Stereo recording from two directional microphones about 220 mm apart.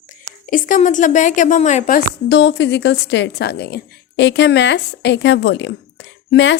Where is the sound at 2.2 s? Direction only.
55° left (ahead or behind).